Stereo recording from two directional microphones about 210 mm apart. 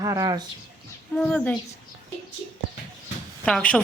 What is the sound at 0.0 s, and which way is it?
Speech, 15° right (ahead or behind).